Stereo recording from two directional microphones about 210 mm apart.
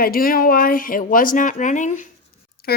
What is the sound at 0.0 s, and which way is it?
Speech, 45° left (ahead or behind).